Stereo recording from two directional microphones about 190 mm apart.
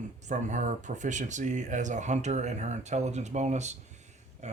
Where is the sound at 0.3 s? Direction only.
40° right (ahead or behind).